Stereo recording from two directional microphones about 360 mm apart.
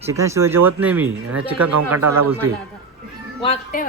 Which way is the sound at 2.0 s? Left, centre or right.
Right.